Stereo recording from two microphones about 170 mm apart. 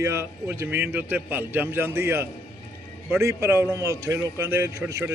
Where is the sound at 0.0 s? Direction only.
15° right (ahead or behind).